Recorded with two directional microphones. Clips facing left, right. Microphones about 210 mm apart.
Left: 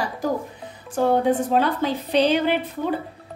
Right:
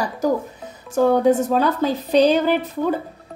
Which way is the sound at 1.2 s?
40° right (ahead or behind).